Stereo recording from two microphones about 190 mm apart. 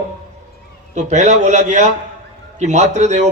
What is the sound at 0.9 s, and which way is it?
A man's voice, 40° right (ahead or behind).